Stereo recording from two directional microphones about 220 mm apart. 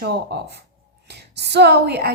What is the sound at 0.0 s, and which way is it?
A woman's voice, 45° right (ahead or behind).